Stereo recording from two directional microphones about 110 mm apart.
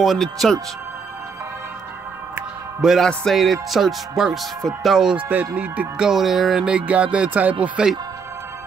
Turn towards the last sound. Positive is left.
turn(degrees=-10)  # may be behind; listen again after turning